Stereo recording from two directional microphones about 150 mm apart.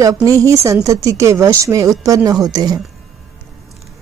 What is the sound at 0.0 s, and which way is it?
Speech, 20° right (ahead or behind).